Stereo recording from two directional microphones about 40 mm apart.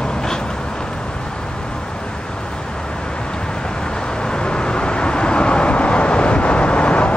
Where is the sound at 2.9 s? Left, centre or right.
Left.